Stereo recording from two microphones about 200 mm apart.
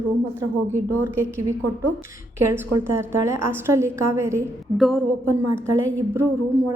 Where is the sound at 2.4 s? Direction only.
10° right (ahead or behind).